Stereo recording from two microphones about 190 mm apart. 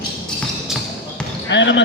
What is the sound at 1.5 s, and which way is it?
Speech, 70° left (ahead or behind).